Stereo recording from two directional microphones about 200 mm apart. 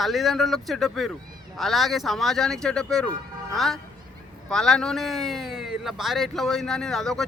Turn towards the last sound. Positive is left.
turn(degrees=0)  # may be behind; listen again after turning